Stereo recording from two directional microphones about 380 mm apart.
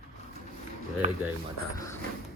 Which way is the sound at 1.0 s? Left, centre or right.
Centre.